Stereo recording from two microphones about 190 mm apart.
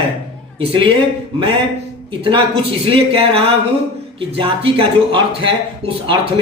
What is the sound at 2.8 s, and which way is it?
Speech, 30° right (ahead or behind).